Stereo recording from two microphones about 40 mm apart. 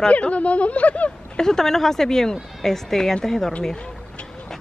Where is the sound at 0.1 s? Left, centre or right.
Left.